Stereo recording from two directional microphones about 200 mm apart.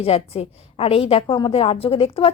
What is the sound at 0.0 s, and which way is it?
A woman's voice, 30° left (ahead or behind).